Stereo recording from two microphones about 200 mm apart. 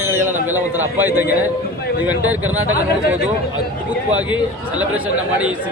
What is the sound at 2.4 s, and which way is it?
Speech, 90° right.